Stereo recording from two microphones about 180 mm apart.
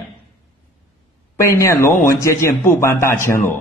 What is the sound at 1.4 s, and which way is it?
A man's voice, 15° left (ahead or behind).